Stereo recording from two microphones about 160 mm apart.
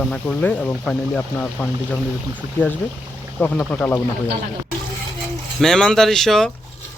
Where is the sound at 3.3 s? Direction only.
10° left (ahead or behind).